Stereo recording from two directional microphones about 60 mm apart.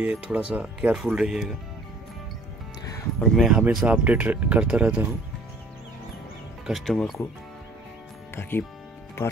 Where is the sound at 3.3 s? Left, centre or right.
Centre.